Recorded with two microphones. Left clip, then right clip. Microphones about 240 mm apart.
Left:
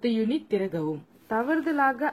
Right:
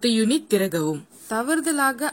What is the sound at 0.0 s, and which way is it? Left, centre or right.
A woman's voice, right.